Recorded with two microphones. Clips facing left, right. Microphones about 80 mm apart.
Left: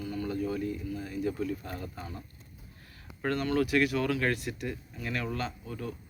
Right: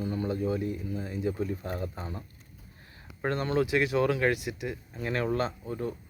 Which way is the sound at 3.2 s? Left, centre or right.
Right.